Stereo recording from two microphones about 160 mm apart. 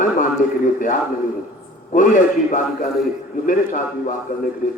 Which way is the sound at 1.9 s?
55° left (ahead or behind).